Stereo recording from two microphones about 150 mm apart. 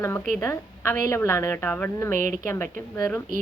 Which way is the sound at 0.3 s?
15° left (ahead or behind).